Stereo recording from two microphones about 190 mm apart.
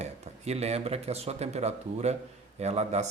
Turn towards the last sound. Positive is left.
turn(degrees=-35)  # may be behind; listen again after turning